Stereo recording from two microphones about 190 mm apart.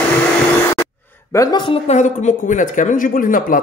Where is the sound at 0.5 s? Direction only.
10° left (ahead or behind).